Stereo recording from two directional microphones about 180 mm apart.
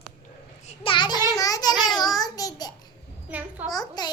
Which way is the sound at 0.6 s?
30° left (ahead or behind).